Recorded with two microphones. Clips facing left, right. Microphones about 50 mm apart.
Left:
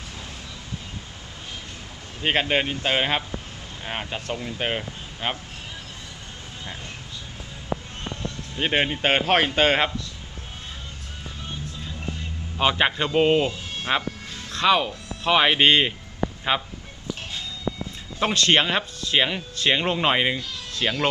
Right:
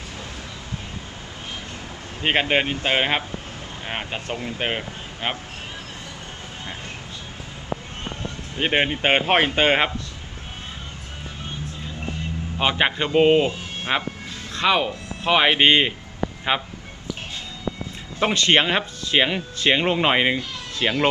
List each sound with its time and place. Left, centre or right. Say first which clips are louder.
2.2 s speech: right 2 dB; centre
4.6 s speech: even; centre
8.5 s speech: right 2 dB; centre
12.5 s speech: even; centre
14.5 s a sound: even; centre
15.3 s speech: right 1 dB; centre
18.2 s speech: right 2 dB; centre